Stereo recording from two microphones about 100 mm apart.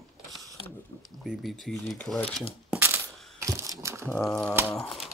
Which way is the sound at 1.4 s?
Centre (ahead or behind).